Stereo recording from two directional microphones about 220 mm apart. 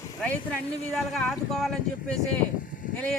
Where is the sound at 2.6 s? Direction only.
40° left (ahead or behind).